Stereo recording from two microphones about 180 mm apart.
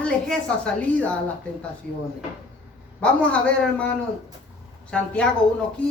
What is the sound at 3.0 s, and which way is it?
A man's voice, 5° left (ahead or behind).